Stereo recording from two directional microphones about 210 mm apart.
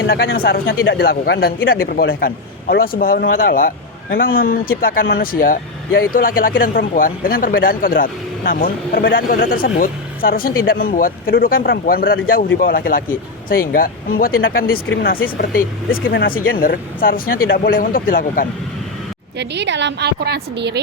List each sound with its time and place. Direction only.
0.3 s speech: 45° left (ahead or behind)
19.4 s a woman's voice: 55° right (ahead or behind)